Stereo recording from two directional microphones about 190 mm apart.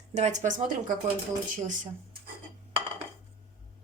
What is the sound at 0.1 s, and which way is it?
Speech, 40° right (ahead or behind).